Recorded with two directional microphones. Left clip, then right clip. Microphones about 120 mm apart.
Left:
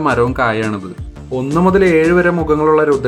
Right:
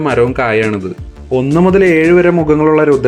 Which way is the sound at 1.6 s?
30° right (ahead or behind).